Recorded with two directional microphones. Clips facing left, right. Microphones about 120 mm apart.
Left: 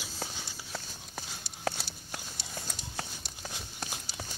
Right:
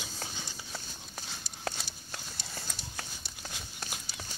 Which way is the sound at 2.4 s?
20° left (ahead or behind).